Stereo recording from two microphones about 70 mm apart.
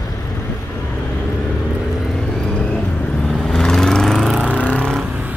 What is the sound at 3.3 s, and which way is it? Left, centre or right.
Vehicle, centre.